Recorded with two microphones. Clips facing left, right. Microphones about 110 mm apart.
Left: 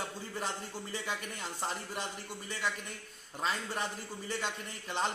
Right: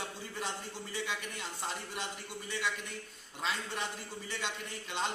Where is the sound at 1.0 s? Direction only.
45° left (ahead or behind).